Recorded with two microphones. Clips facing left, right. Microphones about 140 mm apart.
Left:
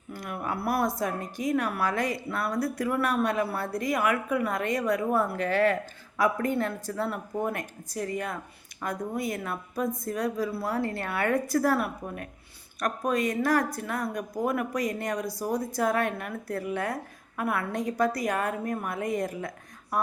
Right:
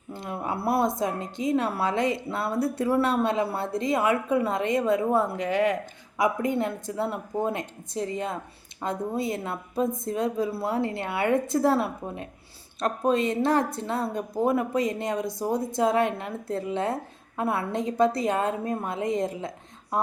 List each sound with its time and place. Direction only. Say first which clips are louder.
0.1 s speech: right 2 dB; 25° right (ahead or behind)